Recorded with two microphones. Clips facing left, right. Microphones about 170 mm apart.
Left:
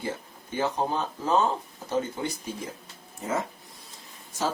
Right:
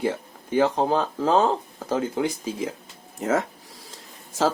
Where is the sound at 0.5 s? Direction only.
90° right.